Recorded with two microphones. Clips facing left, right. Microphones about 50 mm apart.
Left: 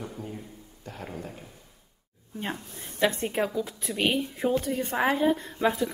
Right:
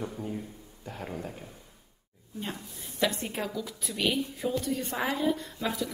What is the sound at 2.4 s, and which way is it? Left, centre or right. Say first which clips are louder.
Speech: left 3 dB; left.